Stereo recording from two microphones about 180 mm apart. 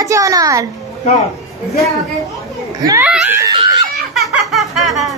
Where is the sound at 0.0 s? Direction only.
20° right (ahead or behind).